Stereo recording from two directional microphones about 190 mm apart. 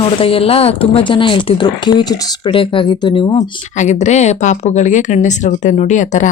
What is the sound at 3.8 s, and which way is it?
Speech, 40° left (ahead or behind).